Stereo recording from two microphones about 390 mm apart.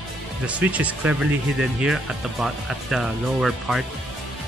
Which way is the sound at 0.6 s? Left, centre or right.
Centre.